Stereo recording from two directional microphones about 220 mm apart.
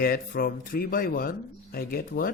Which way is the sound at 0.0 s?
40° left (ahead or behind).